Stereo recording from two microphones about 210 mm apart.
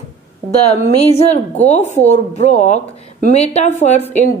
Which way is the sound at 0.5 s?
30° left (ahead or behind).